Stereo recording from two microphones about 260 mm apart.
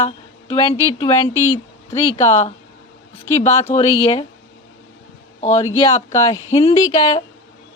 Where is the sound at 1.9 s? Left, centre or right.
Left.